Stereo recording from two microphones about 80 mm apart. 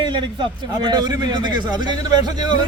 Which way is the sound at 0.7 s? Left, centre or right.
Right.